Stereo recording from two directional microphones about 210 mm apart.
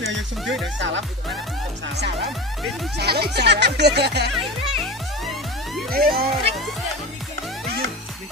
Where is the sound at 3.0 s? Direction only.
50° right (ahead or behind).